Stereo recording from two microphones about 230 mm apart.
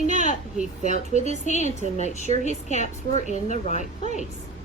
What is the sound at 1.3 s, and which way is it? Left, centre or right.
Speech, left.